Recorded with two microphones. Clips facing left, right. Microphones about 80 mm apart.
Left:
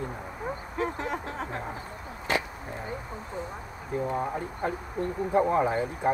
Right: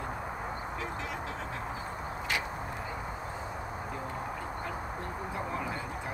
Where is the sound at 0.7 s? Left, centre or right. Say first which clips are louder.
Left 6 dB; left.